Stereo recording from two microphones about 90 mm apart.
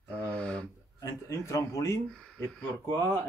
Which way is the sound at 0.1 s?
10° left (ahead or behind).